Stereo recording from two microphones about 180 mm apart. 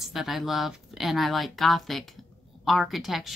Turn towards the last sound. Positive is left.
turn(degrees=0)  # may be behind; listen again after turning